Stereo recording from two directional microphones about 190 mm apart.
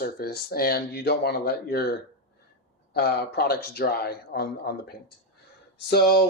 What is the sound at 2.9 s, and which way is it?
Speech, 55° left (ahead or behind).